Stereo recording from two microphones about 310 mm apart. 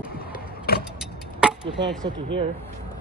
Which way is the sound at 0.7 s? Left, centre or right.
Left.